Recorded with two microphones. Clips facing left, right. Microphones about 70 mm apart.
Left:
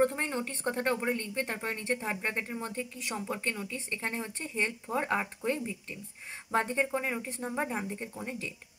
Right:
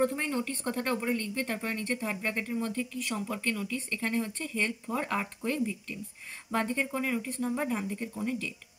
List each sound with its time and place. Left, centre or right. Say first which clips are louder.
0.0 s speech: even; left